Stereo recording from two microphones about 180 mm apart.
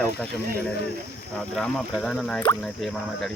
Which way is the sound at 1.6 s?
Centre (ahead or behind).